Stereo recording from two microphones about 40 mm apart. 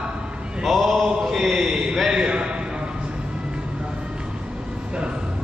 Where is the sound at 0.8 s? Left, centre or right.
Centre.